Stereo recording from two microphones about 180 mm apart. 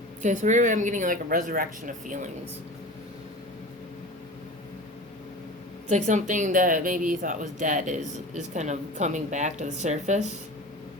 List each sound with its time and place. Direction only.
0.2 s speech: 40° right (ahead or behind)
5.9 s speech: 40° right (ahead or behind)